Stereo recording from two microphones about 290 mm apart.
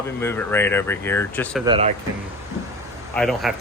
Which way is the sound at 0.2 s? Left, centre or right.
Centre.